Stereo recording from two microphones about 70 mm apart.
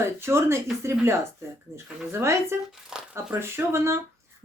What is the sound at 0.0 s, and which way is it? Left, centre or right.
Speech, right.